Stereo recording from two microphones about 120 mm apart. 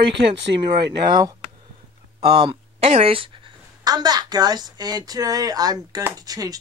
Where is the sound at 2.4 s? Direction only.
50° right (ahead or behind).